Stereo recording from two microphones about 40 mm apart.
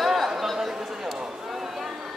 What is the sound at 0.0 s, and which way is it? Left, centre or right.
Chatter, centre.